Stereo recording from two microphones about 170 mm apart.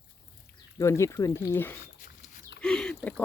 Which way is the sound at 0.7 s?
15° left (ahead or behind).